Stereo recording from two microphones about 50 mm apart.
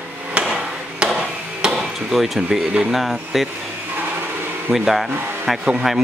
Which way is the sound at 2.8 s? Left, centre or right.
Centre.